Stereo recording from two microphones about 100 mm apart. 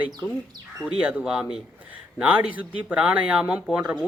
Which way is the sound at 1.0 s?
10° right (ahead or behind).